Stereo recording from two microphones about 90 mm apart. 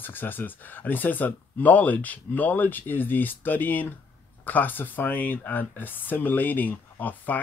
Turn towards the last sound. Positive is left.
turn(degrees=20)  # may be behind; listen again after turning